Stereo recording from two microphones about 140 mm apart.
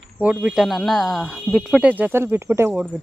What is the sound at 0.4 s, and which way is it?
Speech, 5° right (ahead or behind).